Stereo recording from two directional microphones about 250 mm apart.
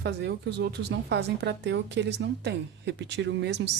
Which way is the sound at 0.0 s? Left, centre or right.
Right.